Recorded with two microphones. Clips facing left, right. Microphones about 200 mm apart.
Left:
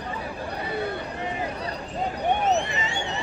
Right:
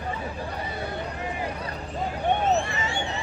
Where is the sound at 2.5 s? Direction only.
20° left (ahead or behind).